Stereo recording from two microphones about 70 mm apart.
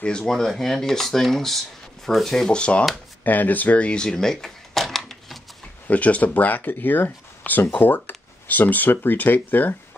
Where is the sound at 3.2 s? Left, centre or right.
Left; by 5.4 s centre.